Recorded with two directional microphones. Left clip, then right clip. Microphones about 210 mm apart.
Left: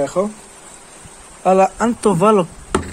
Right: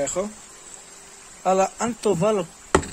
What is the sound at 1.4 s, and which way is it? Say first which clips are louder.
Speech: left 7 dB; centre (ahead or behind).